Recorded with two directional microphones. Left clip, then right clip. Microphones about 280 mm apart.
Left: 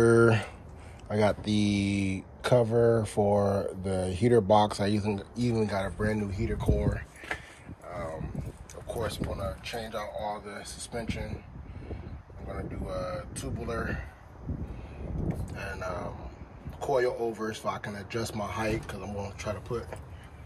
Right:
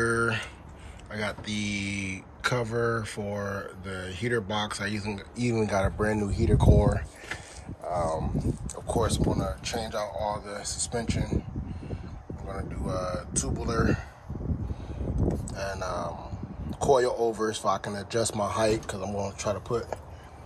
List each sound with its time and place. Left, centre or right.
0.0 s a sound: centre
1.0 s speech: centre
7.9 s a sound: centre
9.0 s speech: centre
12.4 s speech: centre
15.6 s speech: centre